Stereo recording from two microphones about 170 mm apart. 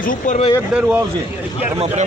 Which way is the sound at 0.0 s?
55° left (ahead or behind).